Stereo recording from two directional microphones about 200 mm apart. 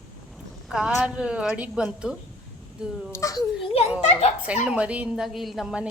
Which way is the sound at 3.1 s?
15° left (ahead or behind).